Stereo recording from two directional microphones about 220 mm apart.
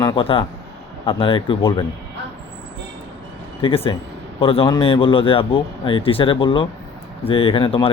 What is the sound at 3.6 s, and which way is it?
Speech, 25° left (ahead or behind).